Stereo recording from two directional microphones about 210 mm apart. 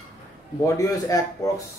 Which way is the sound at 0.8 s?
15° left (ahead or behind).